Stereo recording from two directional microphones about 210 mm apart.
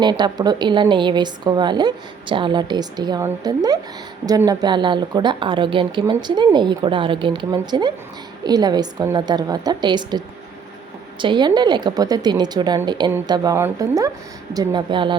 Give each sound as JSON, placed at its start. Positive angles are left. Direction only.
{"t": 0.0, "sound": "a woman's voice", "side_deg": -20}